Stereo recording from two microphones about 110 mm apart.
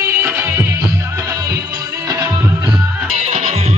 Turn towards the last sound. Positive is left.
turn(degrees=-90)